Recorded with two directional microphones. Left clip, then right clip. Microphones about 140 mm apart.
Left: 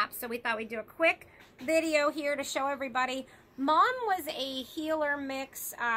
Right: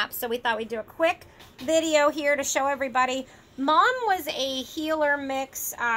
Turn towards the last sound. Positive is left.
turn(degrees=-15)  # may be behind; listen again after turning